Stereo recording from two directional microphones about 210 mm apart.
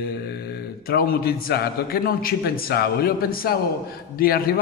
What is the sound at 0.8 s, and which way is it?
A man's voice, 45° left (ahead or behind).